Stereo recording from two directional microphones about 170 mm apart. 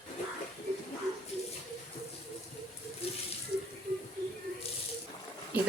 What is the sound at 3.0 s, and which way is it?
Sink, 35° left (ahead or behind).